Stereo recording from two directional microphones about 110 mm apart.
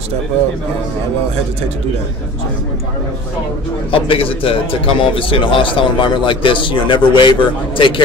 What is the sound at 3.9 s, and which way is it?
A man's voice, 55° left (ahead or behind).